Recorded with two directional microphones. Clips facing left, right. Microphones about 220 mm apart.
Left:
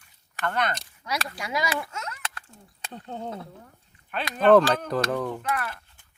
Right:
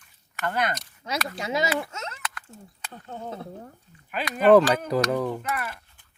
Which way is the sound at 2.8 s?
20° left (ahead or behind).